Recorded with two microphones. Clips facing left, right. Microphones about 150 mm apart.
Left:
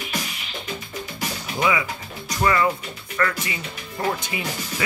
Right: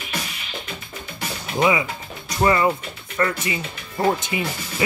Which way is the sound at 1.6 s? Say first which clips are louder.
Right 3 dB; 25° right (ahead or behind).